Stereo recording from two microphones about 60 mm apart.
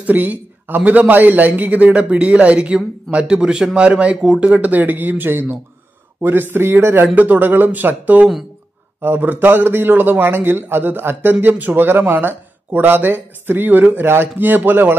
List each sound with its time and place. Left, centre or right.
0.0 s a man's voice: right